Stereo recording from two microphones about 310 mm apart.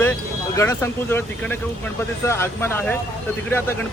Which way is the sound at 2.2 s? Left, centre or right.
Centre.